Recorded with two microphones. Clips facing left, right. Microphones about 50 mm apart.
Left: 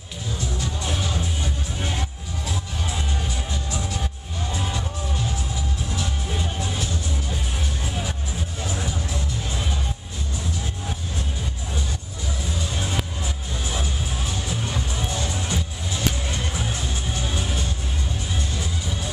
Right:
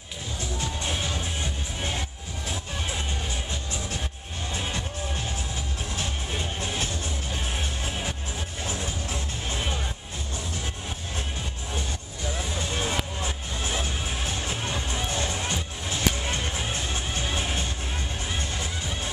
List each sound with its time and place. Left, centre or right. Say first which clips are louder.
12.5 s music: left 1 dB; right